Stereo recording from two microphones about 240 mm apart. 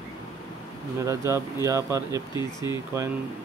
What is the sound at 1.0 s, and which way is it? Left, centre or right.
Speech, centre.